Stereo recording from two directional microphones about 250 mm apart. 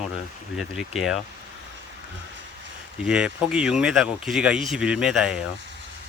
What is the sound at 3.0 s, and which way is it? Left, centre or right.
Speech, centre.